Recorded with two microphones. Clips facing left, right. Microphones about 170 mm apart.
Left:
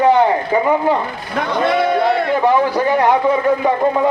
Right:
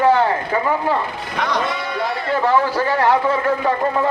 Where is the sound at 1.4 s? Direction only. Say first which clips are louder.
Left 2 dB; 90° right.